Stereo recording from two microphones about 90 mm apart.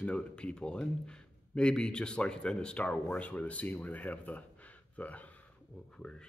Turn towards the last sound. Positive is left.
turn(degrees=10)  # may be behind; listen again after turning